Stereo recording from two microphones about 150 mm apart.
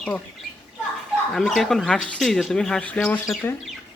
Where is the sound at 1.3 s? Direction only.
Centre (ahead or behind).